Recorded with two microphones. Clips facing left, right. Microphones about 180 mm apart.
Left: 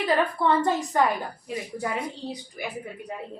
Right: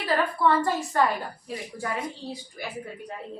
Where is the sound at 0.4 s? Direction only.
20° left (ahead or behind).